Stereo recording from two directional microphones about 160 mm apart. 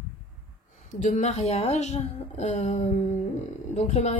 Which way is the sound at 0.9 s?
50° left (ahead or behind).